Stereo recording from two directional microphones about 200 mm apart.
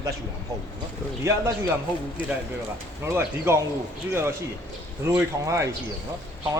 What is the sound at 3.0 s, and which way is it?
Speech, 15° right (ahead or behind).